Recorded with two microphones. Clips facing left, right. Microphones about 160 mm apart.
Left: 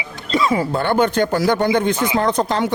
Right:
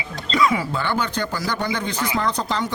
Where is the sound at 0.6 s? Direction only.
55° left (ahead or behind).